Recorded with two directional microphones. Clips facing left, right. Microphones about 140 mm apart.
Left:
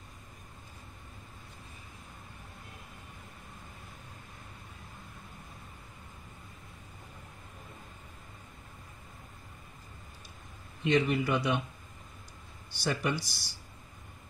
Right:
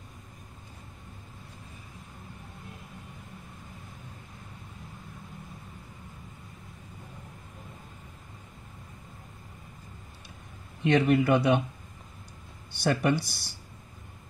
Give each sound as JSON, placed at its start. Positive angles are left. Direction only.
{"t": 10.8, "sound": "speech", "side_deg": -60}
{"t": 12.7, "sound": "speech", "side_deg": -55}